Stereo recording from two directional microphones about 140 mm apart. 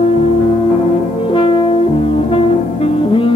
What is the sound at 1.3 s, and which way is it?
French horn, 40° left (ahead or behind).